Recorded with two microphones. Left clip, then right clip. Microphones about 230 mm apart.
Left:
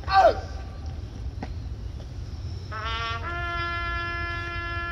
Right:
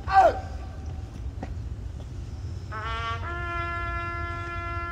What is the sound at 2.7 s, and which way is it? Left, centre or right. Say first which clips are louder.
Music: left 1 dB; left.